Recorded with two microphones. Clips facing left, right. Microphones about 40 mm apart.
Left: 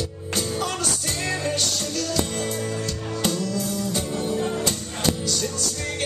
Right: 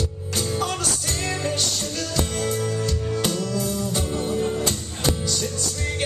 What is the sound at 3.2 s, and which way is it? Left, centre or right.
Music, centre.